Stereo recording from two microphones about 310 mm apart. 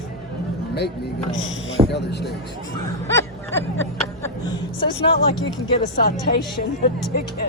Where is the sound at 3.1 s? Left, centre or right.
Centre.